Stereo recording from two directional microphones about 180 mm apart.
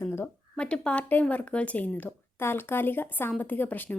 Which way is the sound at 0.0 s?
15° left (ahead or behind).